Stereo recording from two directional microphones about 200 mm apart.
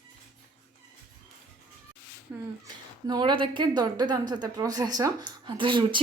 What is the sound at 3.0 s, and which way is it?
A woman's voice, 20° right (ahead or behind).